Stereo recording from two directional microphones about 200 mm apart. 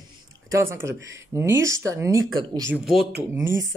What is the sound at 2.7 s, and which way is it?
Speech, centre (ahead or behind).